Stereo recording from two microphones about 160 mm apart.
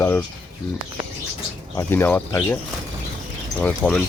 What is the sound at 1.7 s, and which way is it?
Speech, 15° left (ahead or behind).